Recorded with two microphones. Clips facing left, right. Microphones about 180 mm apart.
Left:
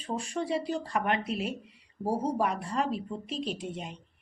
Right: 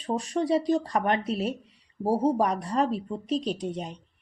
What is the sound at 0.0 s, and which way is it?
A woman's voice, 35° right (ahead or behind).